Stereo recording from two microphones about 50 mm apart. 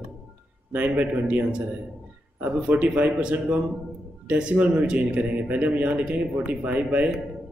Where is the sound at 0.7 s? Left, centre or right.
Right.